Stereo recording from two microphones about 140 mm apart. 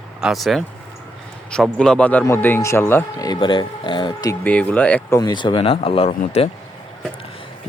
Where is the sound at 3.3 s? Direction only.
35° left (ahead or behind).